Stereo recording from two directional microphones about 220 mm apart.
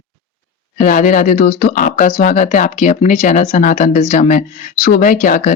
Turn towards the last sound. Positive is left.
turn(degrees=40)  # may be behind; listen again after turning